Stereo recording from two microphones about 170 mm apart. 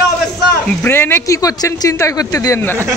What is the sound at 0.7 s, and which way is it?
Speech, 15° left (ahead or behind).